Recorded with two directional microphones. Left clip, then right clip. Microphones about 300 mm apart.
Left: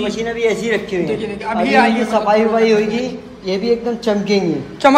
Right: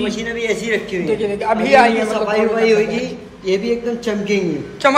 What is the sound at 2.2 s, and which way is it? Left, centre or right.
A woman's voice, left.